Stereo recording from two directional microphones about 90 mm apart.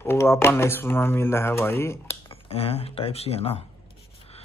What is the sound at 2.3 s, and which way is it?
Speech, 90° left.